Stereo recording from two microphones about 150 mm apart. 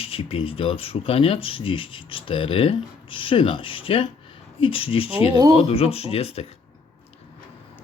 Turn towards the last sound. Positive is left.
turn(degrees=40)  # may be behind; listen again after turning